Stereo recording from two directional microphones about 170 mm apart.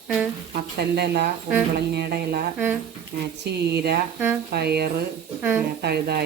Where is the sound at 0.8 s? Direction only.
70° right (ahead or behind).